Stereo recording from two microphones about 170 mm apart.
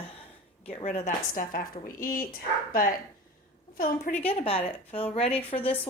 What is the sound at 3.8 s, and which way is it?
Speech, 50° left (ahead or behind).